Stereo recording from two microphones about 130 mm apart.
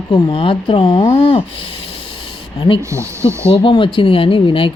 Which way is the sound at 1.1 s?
45° left (ahead or behind).